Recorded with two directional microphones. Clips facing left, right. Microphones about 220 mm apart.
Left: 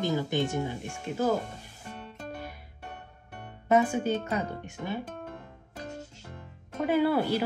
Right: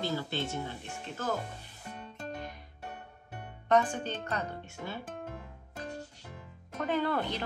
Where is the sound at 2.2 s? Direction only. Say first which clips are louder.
Even; 5° left (ahead or behind).